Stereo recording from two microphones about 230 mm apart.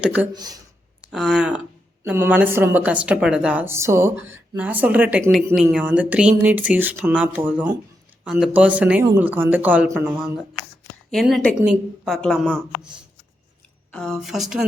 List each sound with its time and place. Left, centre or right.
0.0 s a woman's voice: centre
0.3 s a woman's voice: centre
1.0 s a woman's voice: centre
11.1 s a woman's voice: centre
13.9 s a woman's voice: centre